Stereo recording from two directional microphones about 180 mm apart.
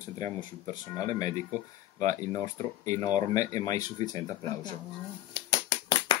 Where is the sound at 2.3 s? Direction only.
15° left (ahead or behind).